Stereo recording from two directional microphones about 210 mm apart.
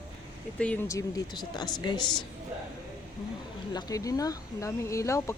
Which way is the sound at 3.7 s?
15° left (ahead or behind).